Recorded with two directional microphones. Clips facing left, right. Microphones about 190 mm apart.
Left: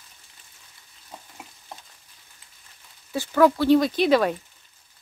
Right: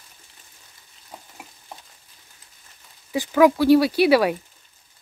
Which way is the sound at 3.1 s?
10° right (ahead or behind).